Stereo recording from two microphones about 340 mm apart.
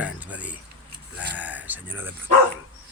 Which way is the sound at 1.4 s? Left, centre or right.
Centre.